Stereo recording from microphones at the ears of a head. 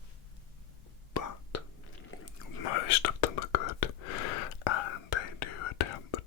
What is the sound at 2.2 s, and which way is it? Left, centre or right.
Whispering, left.